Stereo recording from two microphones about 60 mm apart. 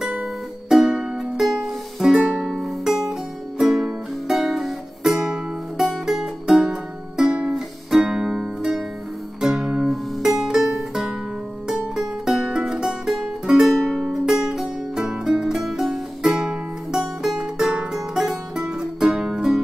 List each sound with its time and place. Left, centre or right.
0.0 s music: centre
2.1 s music: centre
2.4 s music: centre
9.6 s music: centre
9.8 s music: centre
17.2 s music: centre
18.3 s music: centre